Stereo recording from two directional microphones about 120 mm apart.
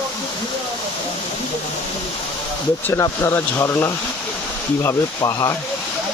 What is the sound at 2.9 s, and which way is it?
Speech, 25° left (ahead or behind).